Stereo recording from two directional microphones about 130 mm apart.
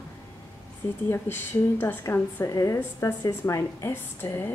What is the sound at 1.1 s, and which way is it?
A woman's voice, 15° left (ahead or behind).